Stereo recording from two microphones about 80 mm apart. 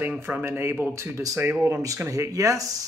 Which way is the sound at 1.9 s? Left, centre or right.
Right.